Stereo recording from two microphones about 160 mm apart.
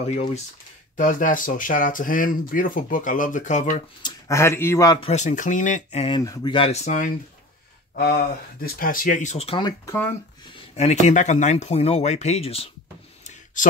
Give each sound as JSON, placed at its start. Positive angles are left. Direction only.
{"t": 0.0, "sound": "speech", "side_deg": 45}
{"t": 4.0, "sound": "speech", "side_deg": 20}
{"t": 5.0, "sound": "speech", "side_deg": 50}
{"t": 6.1, "sound": "speech", "side_deg": 25}
{"t": 7.9, "sound": "speech", "side_deg": 65}
{"t": 9.7, "sound": "speech", "side_deg": 15}
{"t": 10.5, "sound": "speech", "side_deg": 40}